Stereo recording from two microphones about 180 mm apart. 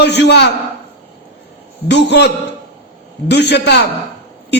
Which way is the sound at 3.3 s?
70° left (ahead or behind).